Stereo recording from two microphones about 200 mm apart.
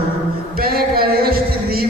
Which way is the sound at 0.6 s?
50° right (ahead or behind).